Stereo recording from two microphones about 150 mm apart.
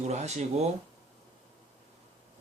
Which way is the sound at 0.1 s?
50° right (ahead or behind).